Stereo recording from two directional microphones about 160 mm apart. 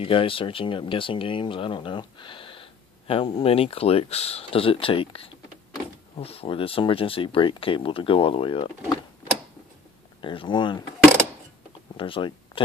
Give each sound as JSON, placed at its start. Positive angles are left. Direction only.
{"t": 0.0, "sound": "speech", "side_deg": 35}
{"t": 10.2, "sound": "speech", "side_deg": 30}
{"t": 12.0, "sound": "speech", "side_deg": 30}